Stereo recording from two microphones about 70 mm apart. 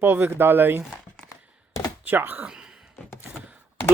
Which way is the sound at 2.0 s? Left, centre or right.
Right.